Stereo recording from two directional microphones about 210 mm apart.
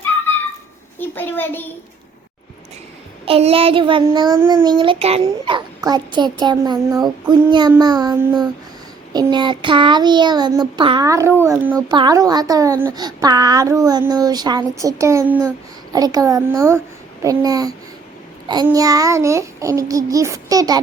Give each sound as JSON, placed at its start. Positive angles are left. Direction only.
{"t": 0.9, "sound": "a sound", "side_deg": 10}
{"t": 3.2, "sound": "child singing", "side_deg": -25}
{"t": 11.9, "sound": "a child's voice", "side_deg": -20}